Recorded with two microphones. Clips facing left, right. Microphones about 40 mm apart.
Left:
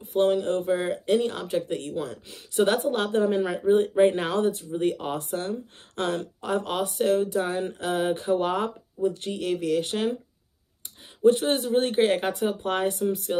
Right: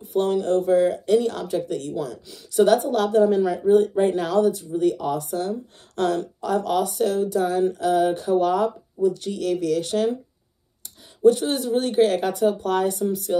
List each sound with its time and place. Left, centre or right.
0.0 s a sound: left
0.3 s speech: centre
11.2 s speech: left